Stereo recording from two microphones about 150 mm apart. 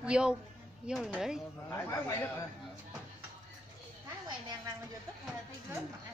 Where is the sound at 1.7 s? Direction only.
20° left (ahead or behind).